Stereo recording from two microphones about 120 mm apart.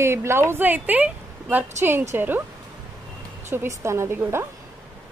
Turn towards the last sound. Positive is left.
turn(degrees=-20)  # may be behind; listen again after turning